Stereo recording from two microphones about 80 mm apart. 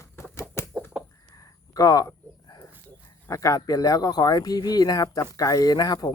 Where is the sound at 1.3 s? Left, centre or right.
Left.